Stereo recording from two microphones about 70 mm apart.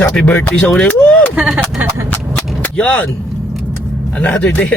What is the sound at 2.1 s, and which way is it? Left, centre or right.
Gunshot, left.